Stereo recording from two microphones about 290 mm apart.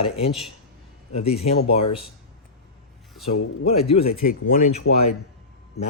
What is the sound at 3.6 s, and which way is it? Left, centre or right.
Speech, left.